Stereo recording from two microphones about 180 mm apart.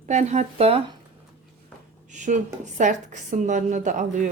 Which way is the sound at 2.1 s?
45° right (ahead or behind).